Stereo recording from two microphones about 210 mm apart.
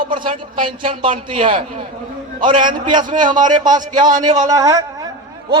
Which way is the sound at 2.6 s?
40° right (ahead or behind).